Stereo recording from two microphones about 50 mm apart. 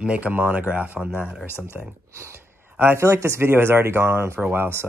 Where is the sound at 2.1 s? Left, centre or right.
Right.